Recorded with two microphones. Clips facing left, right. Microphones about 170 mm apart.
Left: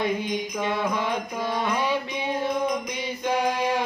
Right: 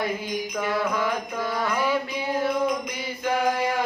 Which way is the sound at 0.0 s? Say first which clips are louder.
Left 2 dB; 25° left (ahead or behind).